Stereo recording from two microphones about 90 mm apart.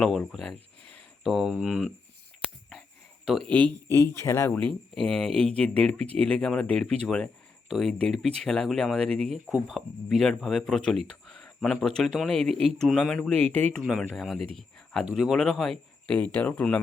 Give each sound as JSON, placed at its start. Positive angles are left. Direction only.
{"t": 0.3, "sound": "a sound", "side_deg": 5}
{"t": 1.6, "sound": "speech", "side_deg": 0}
{"t": 3.2, "sound": "speech", "side_deg": 5}
{"t": 3.8, "sound": "speech", "side_deg": 30}
{"t": 4.5, "sound": "speech", "side_deg": 10}
{"t": 13.3, "sound": "speech", "side_deg": 20}
{"t": 13.7, "sound": "speech", "side_deg": 0}
{"t": 16.1, "sound": "speech", "side_deg": 15}